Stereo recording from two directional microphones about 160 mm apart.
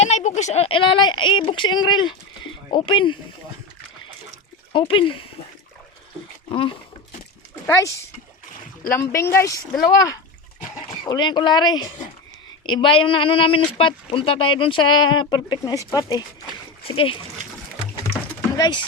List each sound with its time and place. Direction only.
0.0 s speech: 45° left (ahead or behind)
4.7 s speech: 30° left (ahead or behind)
6.5 s speech: 35° left (ahead or behind)
7.7 s speech: 20° left (ahead or behind)
11.0 s speech: 30° left (ahead or behind)
16.8 s speech: 35° left (ahead or behind)
18.5 s speech: 25° left (ahead or behind)